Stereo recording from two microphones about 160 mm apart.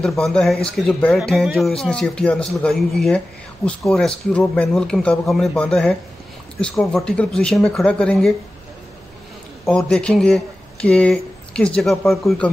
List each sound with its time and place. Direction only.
0.0 s a man's voice: 5° left (ahead or behind)
9.7 s a man's voice: 5° left (ahead or behind)